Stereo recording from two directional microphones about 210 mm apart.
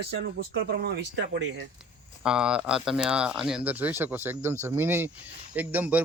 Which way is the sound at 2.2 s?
5° right (ahead or behind).